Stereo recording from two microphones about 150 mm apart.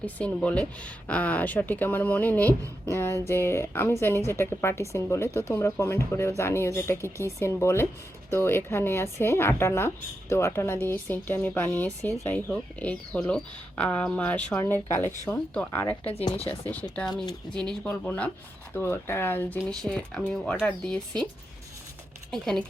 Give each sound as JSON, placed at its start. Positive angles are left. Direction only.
{"t": 0.0, "sound": "speech", "side_deg": 10}
{"t": 16.1, "sound": "speech", "side_deg": 40}
{"t": 16.5, "sound": "speech", "side_deg": 10}
{"t": 17.5, "sound": "speech", "side_deg": -30}
{"t": 17.8, "sound": "speech", "side_deg": 10}
{"t": 22.3, "sound": "speech", "side_deg": 0}